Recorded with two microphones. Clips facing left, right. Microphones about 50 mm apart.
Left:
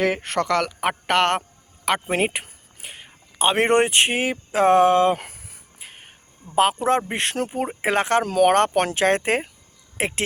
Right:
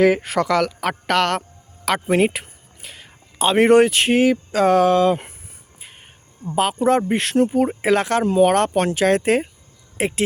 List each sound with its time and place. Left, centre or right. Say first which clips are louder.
0.0 s speech: right 6 dB; centre
0.8 s speech: right 1 dB; left
1.3 s a sound: even; centre
3.3 s speech: right 5 dB; left
5.1 s a sound: right 3 dB; left
6.6 s speech: right 1 dB; left
8.2 s speech: right 4 dB; left
8.4 s speech: even; left
8.7 s speech: right 2 dB; left
9.0 s speech: right 5 dB; left
10.0 s speech: right 4 dB; left